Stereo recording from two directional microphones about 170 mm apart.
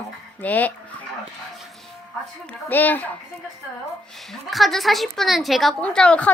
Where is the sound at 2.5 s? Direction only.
10° left (ahead or behind).